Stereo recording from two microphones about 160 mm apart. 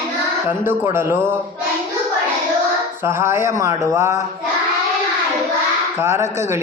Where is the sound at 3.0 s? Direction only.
15° right (ahead or behind).